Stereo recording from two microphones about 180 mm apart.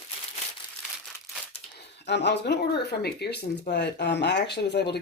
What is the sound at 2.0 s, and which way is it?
Speech, 70° left (ahead or behind).